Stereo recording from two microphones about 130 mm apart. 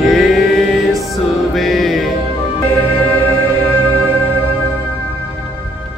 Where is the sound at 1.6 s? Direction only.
Centre (ahead or behind).